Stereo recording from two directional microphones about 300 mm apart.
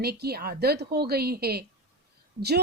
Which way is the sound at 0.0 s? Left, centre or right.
Right.